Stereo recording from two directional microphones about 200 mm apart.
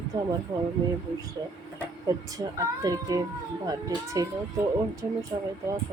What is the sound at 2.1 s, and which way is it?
Speech, 15° right (ahead or behind).